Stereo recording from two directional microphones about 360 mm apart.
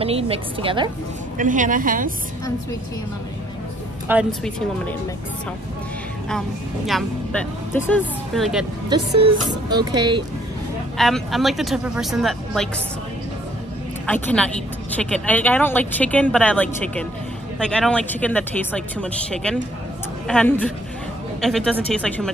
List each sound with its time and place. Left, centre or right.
0.0 s a woman's voice: centre
4.1 s speech: centre
6.9 s speech: centre
8.9 s a woman's voice: centre
11.0 s speech: centre
14.0 s speech: centre